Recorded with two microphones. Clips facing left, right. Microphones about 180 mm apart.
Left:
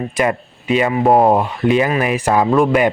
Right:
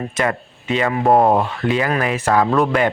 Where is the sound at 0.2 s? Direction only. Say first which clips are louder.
Left 3 dB; 15° left (ahead or behind).